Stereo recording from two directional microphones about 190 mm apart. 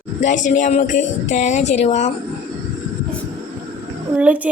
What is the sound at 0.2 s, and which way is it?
Speech, 40° left (ahead or behind).